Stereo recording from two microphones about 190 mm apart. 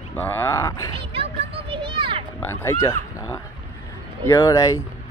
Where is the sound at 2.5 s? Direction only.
15° left (ahead or behind).